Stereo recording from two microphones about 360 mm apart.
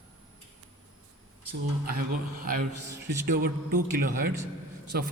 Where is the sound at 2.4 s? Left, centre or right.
Right.